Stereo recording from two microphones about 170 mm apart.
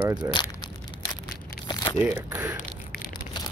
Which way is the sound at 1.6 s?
25° left (ahead or behind).